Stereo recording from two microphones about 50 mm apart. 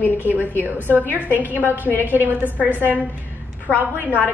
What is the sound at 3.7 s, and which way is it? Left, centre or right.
Speech, left.